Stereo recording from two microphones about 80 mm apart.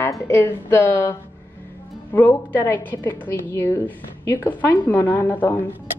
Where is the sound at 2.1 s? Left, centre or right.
Left.